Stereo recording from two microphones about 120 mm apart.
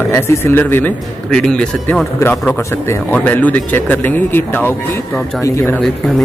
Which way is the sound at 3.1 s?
15° left (ahead or behind).